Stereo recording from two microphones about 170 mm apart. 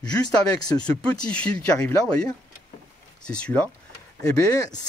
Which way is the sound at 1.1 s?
5° left (ahead or behind).